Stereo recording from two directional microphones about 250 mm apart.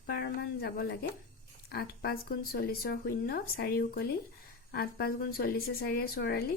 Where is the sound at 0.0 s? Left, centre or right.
Left.